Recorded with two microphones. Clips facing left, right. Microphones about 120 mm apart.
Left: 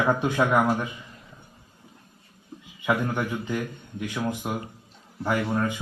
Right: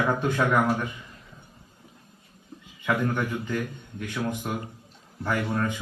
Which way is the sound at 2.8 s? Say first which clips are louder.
Left 1 dB; 15° left (ahead or behind).